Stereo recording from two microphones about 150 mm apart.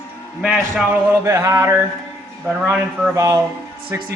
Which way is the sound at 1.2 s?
20° right (ahead or behind).